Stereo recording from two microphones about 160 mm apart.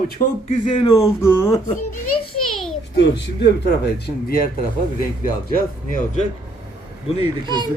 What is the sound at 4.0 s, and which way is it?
Speech, 70° left (ahead or behind).